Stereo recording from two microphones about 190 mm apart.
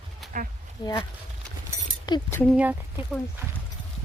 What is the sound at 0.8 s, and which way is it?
Speech, 20° left (ahead or behind).